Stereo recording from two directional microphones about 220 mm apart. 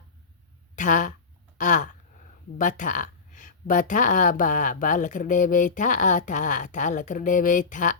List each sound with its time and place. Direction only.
0.8 s speech: 35° left (ahead or behind)
1.5 s gasp: 35° left (ahead or behind)
2.6 s speech: 35° left (ahead or behind)